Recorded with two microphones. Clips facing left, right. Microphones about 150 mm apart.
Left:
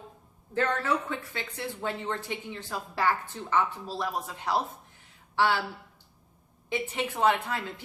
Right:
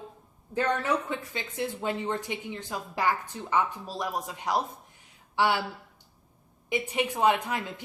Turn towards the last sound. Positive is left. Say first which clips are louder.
# right 1 dB
turn(degrees=-15)  # may be behind; listen again after turning